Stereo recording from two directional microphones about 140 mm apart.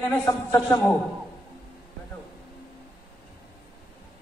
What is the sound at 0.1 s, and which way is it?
Speech, 20° left (ahead or behind).